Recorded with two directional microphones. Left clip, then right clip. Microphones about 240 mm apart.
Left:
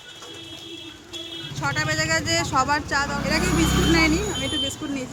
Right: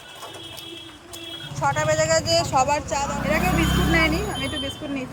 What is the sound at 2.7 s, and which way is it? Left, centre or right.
Speech, left.